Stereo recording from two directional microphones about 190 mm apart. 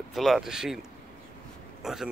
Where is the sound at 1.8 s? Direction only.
Centre (ahead or behind).